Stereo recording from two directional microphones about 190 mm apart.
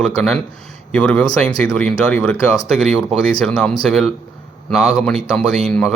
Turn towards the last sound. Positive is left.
turn(degrees=0)  # may be behind; listen again after turning